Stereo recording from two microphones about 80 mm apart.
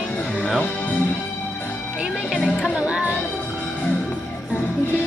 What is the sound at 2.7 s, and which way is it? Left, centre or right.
Music, centre.